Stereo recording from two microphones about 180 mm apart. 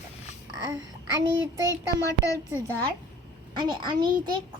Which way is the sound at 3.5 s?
25° right (ahead or behind).